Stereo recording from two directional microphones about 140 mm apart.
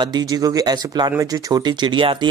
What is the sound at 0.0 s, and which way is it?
Speech, 30° right (ahead or behind).